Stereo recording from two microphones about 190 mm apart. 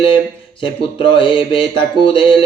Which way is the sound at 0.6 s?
25° left (ahead or behind).